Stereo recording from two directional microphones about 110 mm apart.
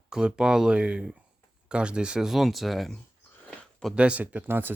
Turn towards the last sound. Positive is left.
turn(degrees=-20)  # may be behind; listen again after turning